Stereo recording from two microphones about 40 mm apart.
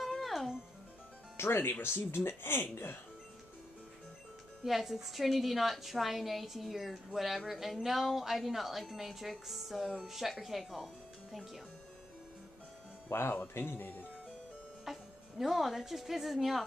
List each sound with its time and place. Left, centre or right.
0.1 s music: centre
1.3 s speech: left
2.7 s speech: left
4.6 s speech: centre
13.1 s speech: left
13.4 s speech: left
14.9 s speech: centre